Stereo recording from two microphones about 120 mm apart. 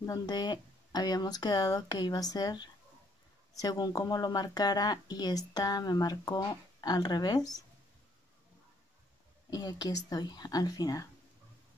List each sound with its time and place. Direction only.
0.0 s speech: 30° left (ahead or behind)
9.5 s speech: 30° left (ahead or behind)